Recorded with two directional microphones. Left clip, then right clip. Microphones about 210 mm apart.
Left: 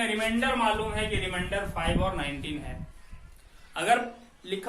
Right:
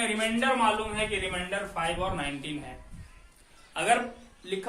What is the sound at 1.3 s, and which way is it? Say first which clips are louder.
Speech: left 1 dB; 5° right (ahead or behind).